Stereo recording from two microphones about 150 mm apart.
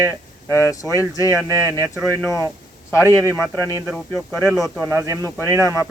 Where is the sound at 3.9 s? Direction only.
5° right (ahead or behind).